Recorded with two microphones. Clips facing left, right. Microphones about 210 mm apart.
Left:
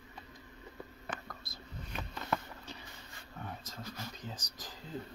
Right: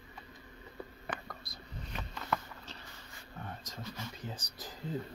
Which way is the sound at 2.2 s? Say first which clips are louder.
Even; 15° left (ahead or behind).